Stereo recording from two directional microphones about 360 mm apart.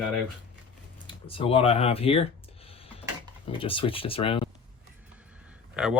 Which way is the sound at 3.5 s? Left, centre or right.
Centre.